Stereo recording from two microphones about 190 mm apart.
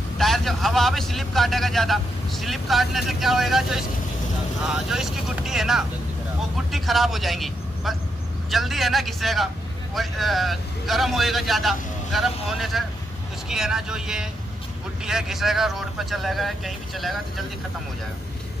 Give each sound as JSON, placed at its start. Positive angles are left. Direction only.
{"t": 0.2, "sound": "a man's voice", "side_deg": 0}